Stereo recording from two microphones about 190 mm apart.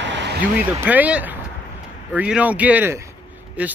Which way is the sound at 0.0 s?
70° right (ahead or behind).